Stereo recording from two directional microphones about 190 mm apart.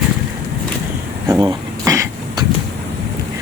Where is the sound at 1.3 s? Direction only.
15° right (ahead or behind).